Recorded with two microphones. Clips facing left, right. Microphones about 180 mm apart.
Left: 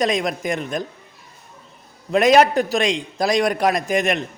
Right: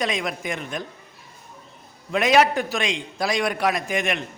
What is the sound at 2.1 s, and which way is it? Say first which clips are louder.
A man's voice: left 4 dB; 40° left (ahead or behind).